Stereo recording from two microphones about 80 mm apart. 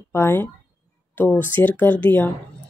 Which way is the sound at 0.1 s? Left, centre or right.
Left.